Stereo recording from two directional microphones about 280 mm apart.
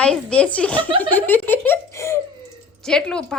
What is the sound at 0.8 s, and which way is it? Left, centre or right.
Speech, centre.